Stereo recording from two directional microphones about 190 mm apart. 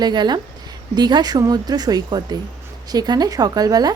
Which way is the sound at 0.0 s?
20° right (ahead or behind).